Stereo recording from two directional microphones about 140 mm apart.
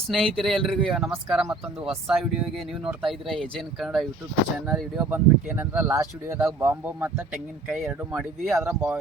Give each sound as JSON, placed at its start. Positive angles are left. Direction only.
{"t": 0.1, "sound": "speech", "side_deg": 0}